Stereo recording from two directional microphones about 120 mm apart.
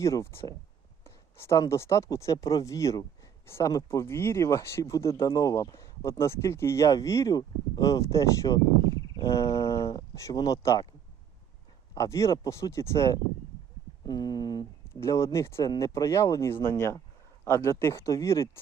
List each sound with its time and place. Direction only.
0.0 s speech: 25° left (ahead or behind)
11.9 s speech: 25° left (ahead or behind)
14.0 s a sound: 35° left (ahead or behind)
15.0 s speech: 25° left (ahead or behind)